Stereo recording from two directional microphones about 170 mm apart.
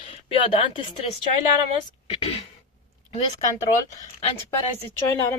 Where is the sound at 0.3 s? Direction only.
30° left (ahead or behind).